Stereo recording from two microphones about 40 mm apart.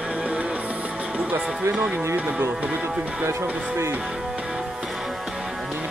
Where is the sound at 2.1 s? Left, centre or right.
Right.